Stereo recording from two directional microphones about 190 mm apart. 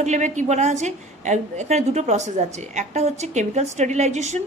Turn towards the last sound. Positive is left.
turn(degrees=-35)  # may be behind; listen again after turning